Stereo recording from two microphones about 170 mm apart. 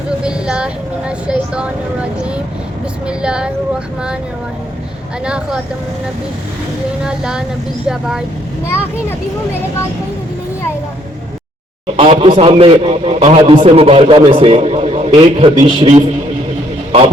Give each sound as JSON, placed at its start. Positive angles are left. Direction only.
{"t": 0.2, "sound": "vehicle", "side_deg": -5}
{"t": 3.1, "sound": "speech", "side_deg": -5}
{"t": 5.2, "sound": "speech", "side_deg": -5}
{"t": 7.0, "sound": "speech", "side_deg": -5}
{"t": 8.6, "sound": "a child's voice", "side_deg": 15}
{"t": 11.9, "sound": "a man's voice", "side_deg": -35}